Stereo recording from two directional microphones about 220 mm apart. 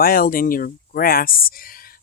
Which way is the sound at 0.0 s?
40° left (ahead or behind).